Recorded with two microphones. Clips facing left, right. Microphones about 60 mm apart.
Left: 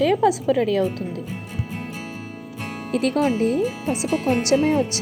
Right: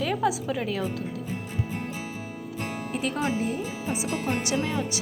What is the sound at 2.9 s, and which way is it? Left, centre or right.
A woman's voice, left.